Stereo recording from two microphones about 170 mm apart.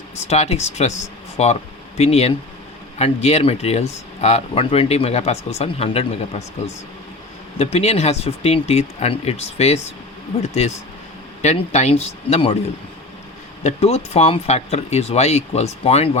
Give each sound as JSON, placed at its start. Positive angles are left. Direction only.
{"t": 0.3, "sound": "speech", "side_deg": 40}
{"t": 7.6, "sound": "speech", "side_deg": 40}
{"t": 13.7, "sound": "speech", "side_deg": 40}